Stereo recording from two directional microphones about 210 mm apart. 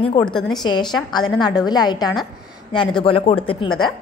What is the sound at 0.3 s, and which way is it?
Speech, centre (ahead or behind).